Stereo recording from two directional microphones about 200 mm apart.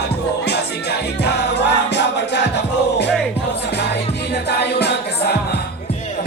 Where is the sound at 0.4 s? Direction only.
55° left (ahead or behind).